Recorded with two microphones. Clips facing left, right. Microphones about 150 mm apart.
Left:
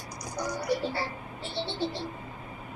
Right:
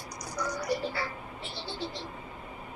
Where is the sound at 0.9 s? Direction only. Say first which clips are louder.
Left 2 dB; 30° left (ahead or behind).